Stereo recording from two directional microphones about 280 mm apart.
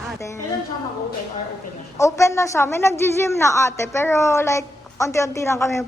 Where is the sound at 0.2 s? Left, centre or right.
Centre.